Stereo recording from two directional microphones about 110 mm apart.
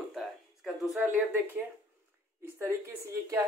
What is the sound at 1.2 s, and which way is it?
Speech, 15° right (ahead or behind).